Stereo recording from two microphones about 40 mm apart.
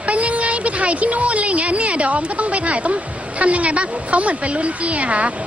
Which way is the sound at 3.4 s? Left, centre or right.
Right.